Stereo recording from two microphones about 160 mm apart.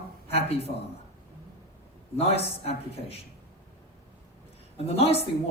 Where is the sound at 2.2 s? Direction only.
40° left (ahead or behind).